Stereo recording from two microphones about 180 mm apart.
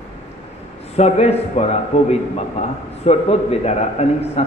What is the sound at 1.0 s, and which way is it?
A man's voice, 35° left (ahead or behind).